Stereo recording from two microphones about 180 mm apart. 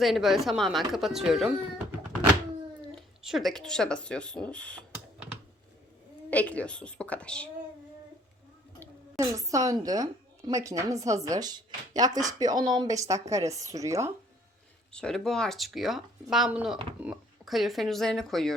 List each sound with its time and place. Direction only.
0.0 s speech: centre (ahead or behind)
3.2 s speech: centre (ahead or behind)
6.3 s speech: 10° left (ahead or behind)
9.1 s a woman's voice: 20° right (ahead or behind)
14.9 s speech: 5° left (ahead or behind)